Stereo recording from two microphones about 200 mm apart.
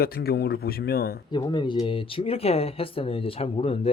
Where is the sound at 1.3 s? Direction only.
20° left (ahead or behind).